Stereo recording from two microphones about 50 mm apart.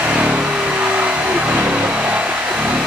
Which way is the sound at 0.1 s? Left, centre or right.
Right.